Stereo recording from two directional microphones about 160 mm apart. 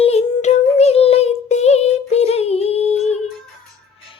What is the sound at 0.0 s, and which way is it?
Music, 40° left (ahead or behind).